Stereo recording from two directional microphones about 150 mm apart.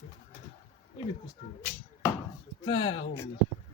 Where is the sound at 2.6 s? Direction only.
35° left (ahead or behind).